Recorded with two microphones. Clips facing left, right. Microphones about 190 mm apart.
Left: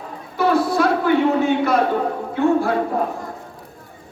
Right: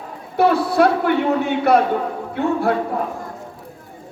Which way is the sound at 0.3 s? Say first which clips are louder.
Right 2 dB; 60° right (ahead or behind).